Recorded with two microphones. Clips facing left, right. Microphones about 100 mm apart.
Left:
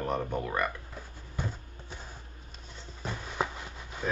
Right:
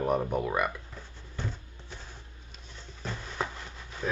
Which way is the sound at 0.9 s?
10° left (ahead or behind).